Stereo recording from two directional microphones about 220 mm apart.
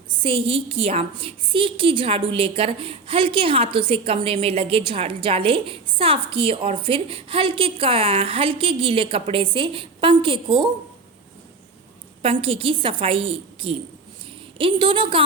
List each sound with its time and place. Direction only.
0.2 s a woman's voice: 25° right (ahead or behind)
12.2 s a woman's voice: 25° right (ahead or behind)